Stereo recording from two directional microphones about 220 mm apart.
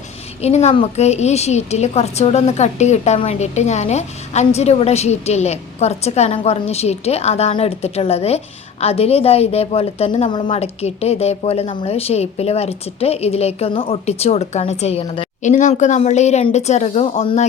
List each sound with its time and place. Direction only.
0.4 s a woman's voice: 30° left (ahead or behind)